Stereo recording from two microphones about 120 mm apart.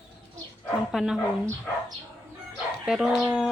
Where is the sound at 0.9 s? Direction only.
5° right (ahead or behind).